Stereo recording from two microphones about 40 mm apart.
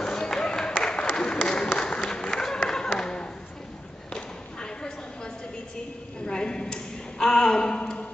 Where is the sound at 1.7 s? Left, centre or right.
Centre.